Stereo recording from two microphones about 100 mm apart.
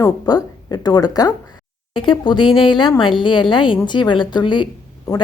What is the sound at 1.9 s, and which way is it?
A woman's voice, 55° left (ahead or behind).